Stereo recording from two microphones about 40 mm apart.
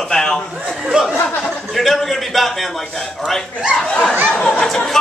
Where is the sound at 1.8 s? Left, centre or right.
Centre.